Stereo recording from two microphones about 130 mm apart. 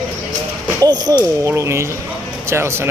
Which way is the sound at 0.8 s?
30° right (ahead or behind).